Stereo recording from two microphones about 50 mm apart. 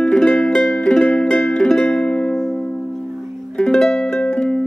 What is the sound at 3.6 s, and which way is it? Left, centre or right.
Music, centre.